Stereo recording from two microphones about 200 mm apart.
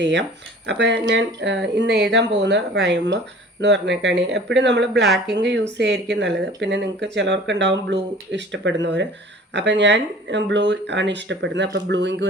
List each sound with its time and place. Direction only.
0.0 s speech: 65° right (ahead or behind)